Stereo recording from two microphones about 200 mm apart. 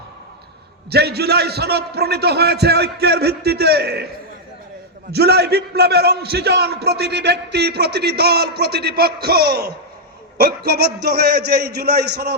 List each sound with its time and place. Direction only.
0.9 s a man's voice: 55° right (ahead or behind)
5.1 s a man's voice: 55° right (ahead or behind)